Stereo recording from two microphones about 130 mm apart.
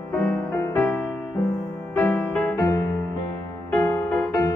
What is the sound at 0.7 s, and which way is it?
Music, 10° left (ahead or behind).